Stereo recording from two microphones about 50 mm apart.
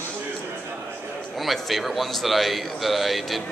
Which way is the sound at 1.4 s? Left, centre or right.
Centre.